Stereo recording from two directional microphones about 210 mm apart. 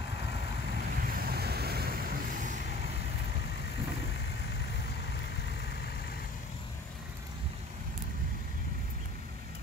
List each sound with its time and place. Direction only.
1.0 s vehicle: 50° right (ahead or behind)